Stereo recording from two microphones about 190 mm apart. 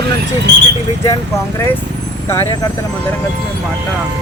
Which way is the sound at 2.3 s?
15° left (ahead or behind).